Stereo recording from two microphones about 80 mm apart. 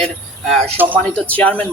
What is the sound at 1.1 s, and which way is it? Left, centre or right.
Speech, centre.